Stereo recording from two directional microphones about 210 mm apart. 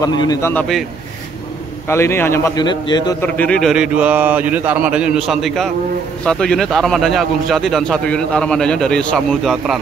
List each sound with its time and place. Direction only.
0.0 s a man's voice: 15° left (ahead or behind)
1.9 s a man's voice: 10° left (ahead or behind)
3.2 s a man's voice: 5° left (ahead or behind)